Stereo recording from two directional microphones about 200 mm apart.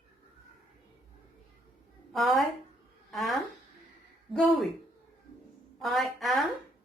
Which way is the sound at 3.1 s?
Centre (ahead or behind).